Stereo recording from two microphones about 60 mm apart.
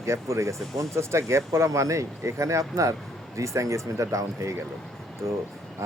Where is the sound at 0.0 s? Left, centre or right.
Right.